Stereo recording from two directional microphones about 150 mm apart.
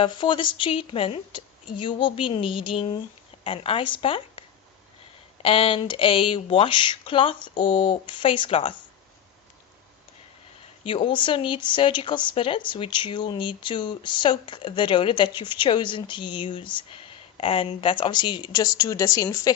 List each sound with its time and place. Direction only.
0.0 s a woman's voice: 35° left (ahead or behind)
10.8 s a woman's voice: 35° left (ahead or behind)